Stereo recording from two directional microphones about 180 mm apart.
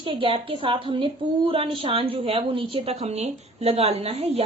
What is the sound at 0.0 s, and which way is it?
A woman's voice, 30° right (ahead or behind).